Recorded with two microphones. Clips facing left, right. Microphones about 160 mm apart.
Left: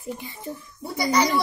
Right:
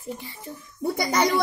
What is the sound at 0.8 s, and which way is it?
Speech, 50° right (ahead or behind).